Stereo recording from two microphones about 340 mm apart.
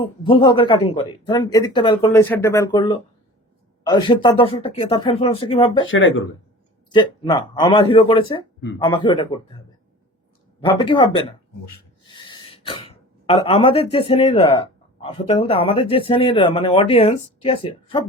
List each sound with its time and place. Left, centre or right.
0.0 s speech: centre
5.9 s speech: left
6.9 s speech: centre
10.6 s speech: centre
12.0 s throat clearing: centre
13.9 s speech: centre